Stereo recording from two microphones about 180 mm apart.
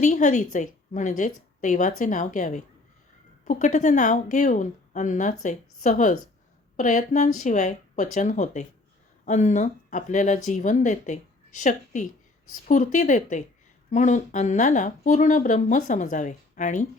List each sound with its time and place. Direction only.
0.0 s a woman's voice: 45° left (ahead or behind)